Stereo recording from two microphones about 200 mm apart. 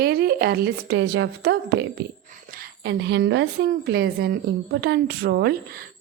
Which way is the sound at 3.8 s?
50° right (ahead or behind).